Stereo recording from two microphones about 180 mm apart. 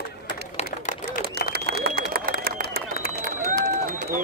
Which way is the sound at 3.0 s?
60° left (ahead or behind).